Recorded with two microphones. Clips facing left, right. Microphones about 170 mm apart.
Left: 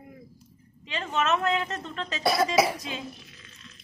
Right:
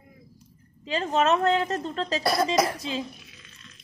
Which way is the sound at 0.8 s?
35° right (ahead or behind).